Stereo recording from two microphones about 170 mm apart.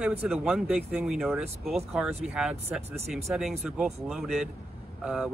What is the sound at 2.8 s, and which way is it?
Speech, 40° right (ahead or behind).